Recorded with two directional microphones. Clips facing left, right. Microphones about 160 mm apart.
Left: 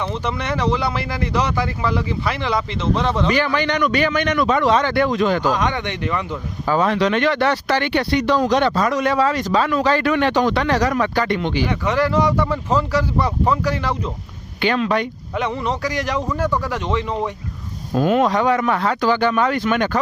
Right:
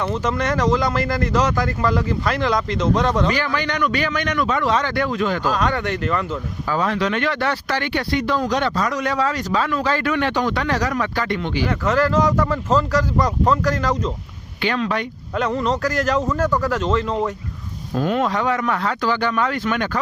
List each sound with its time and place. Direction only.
0.3 s speech: 10° left (ahead or behind)
2.8 s speech: 10° right (ahead or behind)
3.2 s speech: 20° left (ahead or behind)
6.7 s speech: 25° left (ahead or behind)
11.9 s speech: 10° left (ahead or behind)